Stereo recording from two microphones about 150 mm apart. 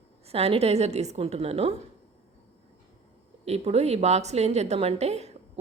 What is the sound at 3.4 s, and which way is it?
A woman's voice, 45° right (ahead or behind).